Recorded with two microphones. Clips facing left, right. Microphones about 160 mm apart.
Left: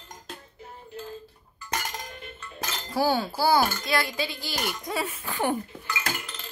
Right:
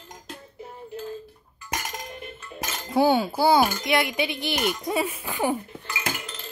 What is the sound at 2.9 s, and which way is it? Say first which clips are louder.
Speech: right 5 dB; 20° right (ahead or behind).